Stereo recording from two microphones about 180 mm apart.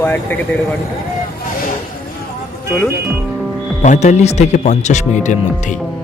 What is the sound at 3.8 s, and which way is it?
Speech, 40° left (ahead or behind).